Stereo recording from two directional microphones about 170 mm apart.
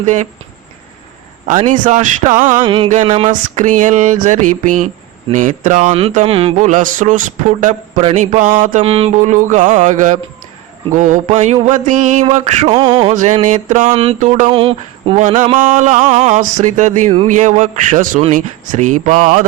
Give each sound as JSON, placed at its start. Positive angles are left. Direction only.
{"t": 0.0, "sound": "mantra", "side_deg": -45}
{"t": 1.6, "sound": "mantra", "side_deg": -45}
{"t": 2.6, "sound": "a sound", "side_deg": -30}
{"t": 3.2, "sound": "mantra", "side_deg": -45}
{"t": 6.1, "sound": "mantra", "side_deg": -35}
{"t": 13.1, "sound": "mantra", "side_deg": -45}
{"t": 13.9, "sound": "a sound", "side_deg": -35}
{"t": 14.2, "sound": "mantra", "side_deg": -45}
{"t": 14.5, "sound": "speech", "side_deg": -35}
{"t": 15.5, "sound": "mantra", "side_deg": -50}